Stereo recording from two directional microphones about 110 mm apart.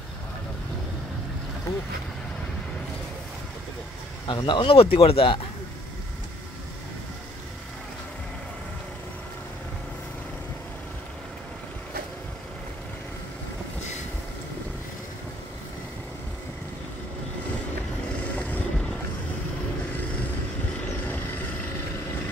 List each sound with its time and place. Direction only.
1.7 s speech: 30° left (ahead or behind)
4.3 s speech: 45° left (ahead or behind)
18.2 s vehicle: 10° left (ahead or behind)